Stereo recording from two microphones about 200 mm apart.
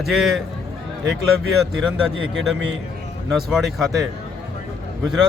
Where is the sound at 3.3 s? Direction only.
Centre (ahead or behind).